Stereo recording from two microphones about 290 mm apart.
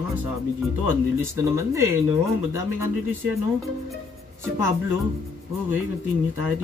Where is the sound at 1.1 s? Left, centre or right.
Centre.